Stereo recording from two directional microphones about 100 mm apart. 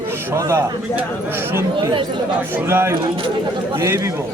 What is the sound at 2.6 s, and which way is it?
Speech, 25° right (ahead or behind).